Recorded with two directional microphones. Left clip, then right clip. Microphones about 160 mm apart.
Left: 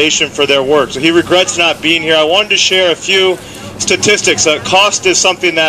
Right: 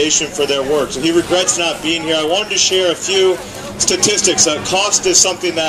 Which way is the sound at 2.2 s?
35° left (ahead or behind).